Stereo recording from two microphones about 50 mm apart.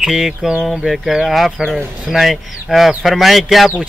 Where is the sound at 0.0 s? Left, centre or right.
Centre.